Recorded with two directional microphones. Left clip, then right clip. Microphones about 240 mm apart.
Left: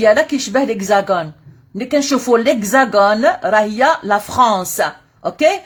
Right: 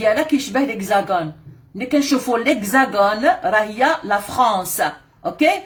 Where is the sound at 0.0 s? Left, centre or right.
Left.